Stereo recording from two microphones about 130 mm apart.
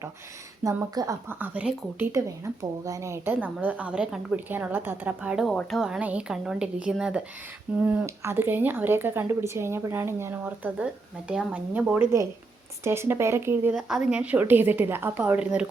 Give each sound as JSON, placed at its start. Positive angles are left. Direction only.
{"t": 0.6, "sound": "a woman's voice", "side_deg": -25}
{"t": 2.1, "sound": "a woman's voice", "side_deg": -25}
{"t": 13.7, "sound": "a woman's voice", "side_deg": -5}